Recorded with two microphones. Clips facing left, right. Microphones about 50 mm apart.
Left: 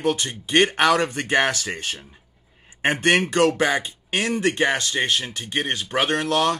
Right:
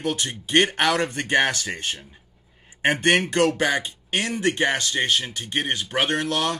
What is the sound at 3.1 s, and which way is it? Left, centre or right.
Speech, centre.